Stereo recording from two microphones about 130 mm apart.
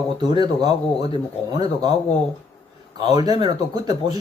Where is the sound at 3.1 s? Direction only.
30° right (ahead or behind).